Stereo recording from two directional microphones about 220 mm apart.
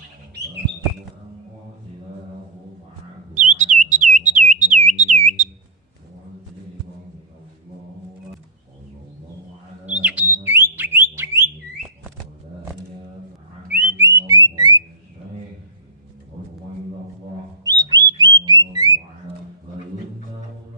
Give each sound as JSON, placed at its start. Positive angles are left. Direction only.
{"t": 3.3, "sound": "bird", "side_deg": -35}
{"t": 9.8, "sound": "bird", "side_deg": -5}
{"t": 13.7, "sound": "music", "side_deg": -10}
{"t": 14.5, "sound": "a sound", "side_deg": -20}
{"t": 17.6, "sound": "bird", "side_deg": -15}
{"t": 18.4, "sound": "a sound", "side_deg": -20}